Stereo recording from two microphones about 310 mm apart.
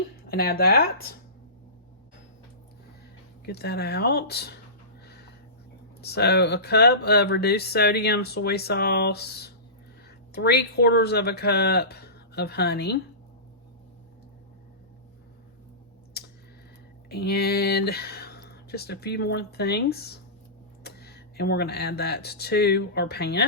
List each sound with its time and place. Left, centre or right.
0.3 s speech: left
3.4 s speech: left
6.0 s speech: left
16.1 s a sound: left
17.1 s speech: left